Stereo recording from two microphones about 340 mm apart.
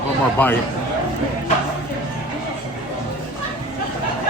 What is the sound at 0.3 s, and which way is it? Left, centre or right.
Speech, centre.